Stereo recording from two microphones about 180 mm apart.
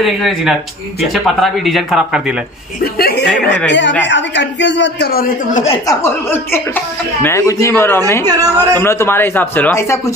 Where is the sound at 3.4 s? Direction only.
80° left.